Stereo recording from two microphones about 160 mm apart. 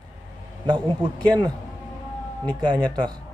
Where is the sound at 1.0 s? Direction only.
25° right (ahead or behind).